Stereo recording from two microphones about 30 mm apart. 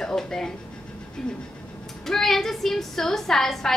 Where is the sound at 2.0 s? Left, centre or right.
Centre.